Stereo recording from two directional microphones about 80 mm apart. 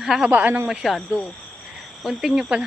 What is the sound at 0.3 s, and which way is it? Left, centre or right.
Speech, centre.